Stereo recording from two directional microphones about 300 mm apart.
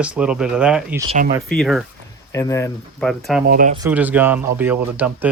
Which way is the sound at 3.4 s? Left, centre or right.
Right.